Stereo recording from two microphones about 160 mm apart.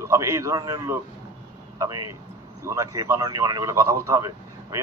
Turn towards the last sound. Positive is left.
turn(degrees=-20)  # may be behind; listen again after turning